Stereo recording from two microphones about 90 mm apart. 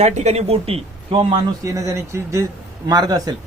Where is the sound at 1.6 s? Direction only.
35° right (ahead or behind).